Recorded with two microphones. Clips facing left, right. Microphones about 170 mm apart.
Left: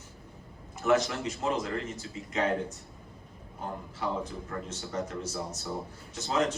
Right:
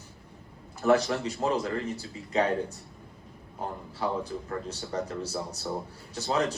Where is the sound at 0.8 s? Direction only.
35° right (ahead or behind).